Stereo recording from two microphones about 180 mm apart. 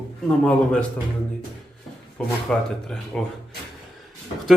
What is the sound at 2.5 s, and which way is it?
Speech, 5° left (ahead or behind).